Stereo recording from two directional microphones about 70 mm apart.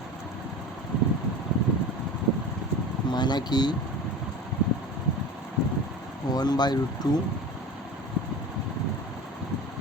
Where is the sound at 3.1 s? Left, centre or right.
Left.